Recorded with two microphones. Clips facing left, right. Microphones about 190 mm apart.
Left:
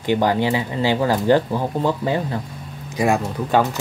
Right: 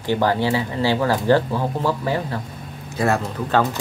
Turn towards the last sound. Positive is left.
turn(degrees=15)  # may be behind; listen again after turning